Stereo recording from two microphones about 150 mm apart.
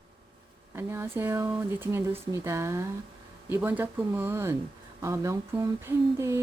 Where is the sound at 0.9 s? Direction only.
15° right (ahead or behind).